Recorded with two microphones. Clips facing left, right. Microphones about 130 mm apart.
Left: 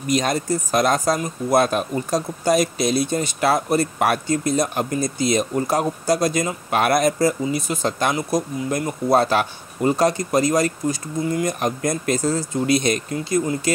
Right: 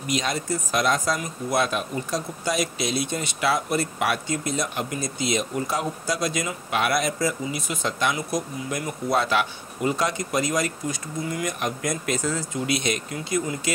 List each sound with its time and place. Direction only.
0.0 s speech: 45° left (ahead or behind)